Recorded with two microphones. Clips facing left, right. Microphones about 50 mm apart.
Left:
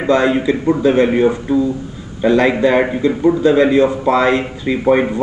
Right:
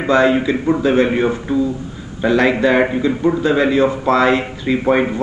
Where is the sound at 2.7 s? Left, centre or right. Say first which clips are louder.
Left 1 dB; centre.